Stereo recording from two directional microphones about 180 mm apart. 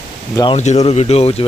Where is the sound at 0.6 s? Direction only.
40° left (ahead or behind).